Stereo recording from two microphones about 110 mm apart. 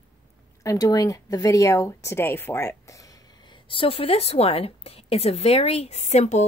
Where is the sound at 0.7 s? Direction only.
35° left (ahead or behind).